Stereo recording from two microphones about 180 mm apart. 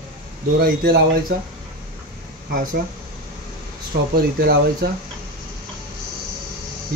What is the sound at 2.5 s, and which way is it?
Speech, 50° right (ahead or behind).